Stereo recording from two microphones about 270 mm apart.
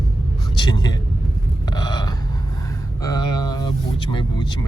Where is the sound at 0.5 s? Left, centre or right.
Centre.